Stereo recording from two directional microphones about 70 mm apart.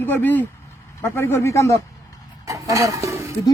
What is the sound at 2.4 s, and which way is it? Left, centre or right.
Speech, right.